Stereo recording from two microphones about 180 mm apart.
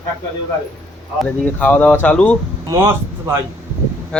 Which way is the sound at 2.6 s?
15° right (ahead or behind).